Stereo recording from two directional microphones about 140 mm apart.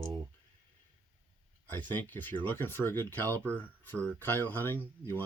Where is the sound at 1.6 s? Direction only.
15° left (ahead or behind).